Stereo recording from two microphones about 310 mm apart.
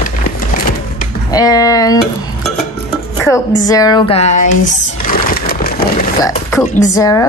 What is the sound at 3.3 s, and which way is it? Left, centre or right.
Speech, centre.